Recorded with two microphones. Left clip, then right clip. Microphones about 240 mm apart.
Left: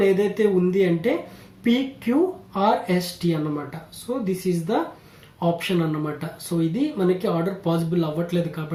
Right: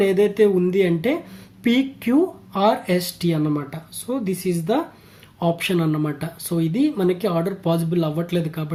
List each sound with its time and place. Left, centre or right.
0.0 s speech: right